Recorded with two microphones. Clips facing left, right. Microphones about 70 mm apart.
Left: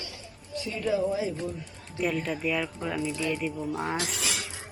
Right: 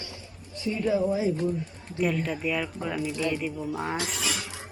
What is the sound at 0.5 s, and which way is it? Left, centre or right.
Speech, right.